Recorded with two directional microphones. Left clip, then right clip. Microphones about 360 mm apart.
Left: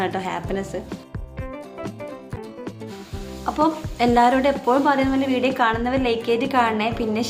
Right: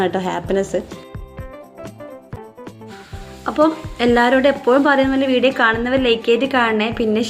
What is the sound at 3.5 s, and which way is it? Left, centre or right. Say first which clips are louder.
A woman's voice: right 5 dB; centre.